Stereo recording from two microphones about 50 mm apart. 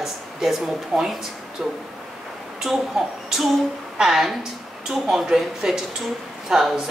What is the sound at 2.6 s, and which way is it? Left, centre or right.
A woman's voice, centre.